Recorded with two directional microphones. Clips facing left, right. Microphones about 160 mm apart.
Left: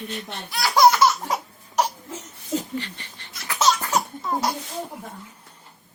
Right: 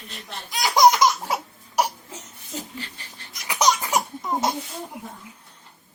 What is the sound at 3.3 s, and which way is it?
Laughter, 15° right (ahead or behind).